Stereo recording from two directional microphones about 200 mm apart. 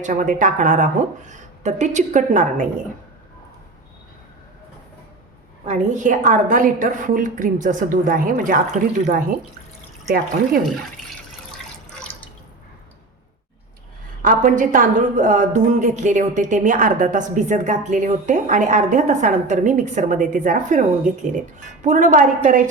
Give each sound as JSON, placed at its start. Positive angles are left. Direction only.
{"t": 0.0, "sound": "a woman's voice", "side_deg": -40}
{"t": 5.6, "sound": "a woman's voice", "side_deg": -35}
{"t": 11.5, "sound": "water", "side_deg": 5}
{"t": 14.2, "sound": "a woman's voice", "side_deg": -40}